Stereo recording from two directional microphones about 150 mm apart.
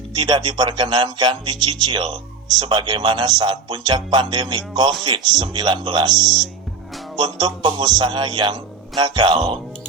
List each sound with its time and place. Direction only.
0.1 s speech: 30° right (ahead or behind)
6.1 s speech: centre (ahead or behind)
7.2 s speech: 30° right (ahead or behind)